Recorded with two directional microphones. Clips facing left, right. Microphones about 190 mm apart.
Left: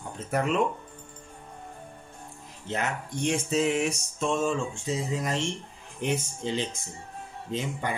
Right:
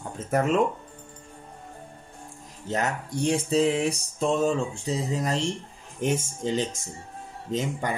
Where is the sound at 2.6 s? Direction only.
40° right (ahead or behind).